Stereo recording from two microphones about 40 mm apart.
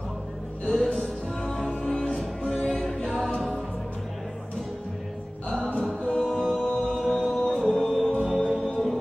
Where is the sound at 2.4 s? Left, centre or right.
Left.